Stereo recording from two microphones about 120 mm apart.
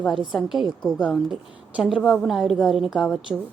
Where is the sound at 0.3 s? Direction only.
Centre (ahead or behind).